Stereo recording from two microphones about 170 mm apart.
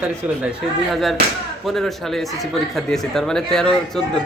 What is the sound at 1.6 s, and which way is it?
Speech, centre (ahead or behind).